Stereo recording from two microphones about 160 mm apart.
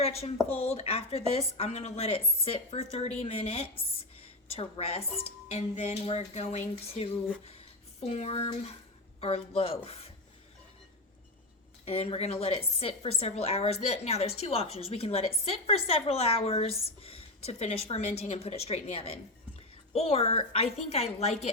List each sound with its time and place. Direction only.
0.0 s a woman's voice: 40° left (ahead or behind)
11.9 s a woman's voice: 35° left (ahead or behind)